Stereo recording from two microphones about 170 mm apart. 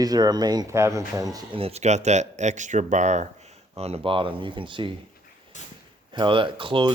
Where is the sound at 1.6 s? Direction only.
40° right (ahead or behind).